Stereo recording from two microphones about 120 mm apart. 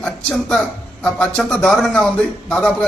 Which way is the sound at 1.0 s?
5° left (ahead or behind).